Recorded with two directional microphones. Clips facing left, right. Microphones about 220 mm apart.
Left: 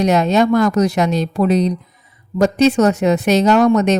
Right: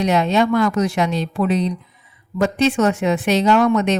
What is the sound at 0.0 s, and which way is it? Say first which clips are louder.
Speech: left 3 dB; 45° left (ahead or behind).